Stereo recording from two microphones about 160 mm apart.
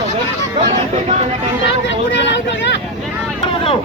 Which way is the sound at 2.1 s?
90° left.